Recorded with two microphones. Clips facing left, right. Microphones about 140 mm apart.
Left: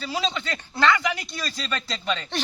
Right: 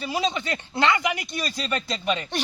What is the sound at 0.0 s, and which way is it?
A man's voice, 20° right (ahead or behind).